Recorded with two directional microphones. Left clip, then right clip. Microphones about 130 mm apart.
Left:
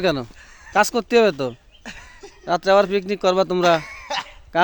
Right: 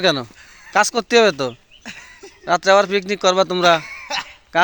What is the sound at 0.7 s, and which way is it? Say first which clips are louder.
Speech: right 2 dB; 20° left (ahead or behind).